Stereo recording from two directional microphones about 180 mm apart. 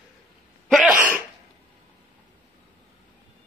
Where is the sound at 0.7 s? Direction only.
Centre (ahead or behind).